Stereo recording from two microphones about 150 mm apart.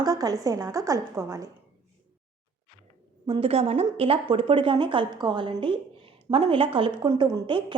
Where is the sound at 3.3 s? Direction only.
40° right (ahead or behind).